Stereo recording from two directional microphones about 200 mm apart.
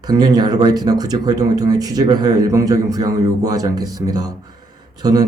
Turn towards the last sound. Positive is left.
turn(degrees=-20)  # may be behind; listen again after turning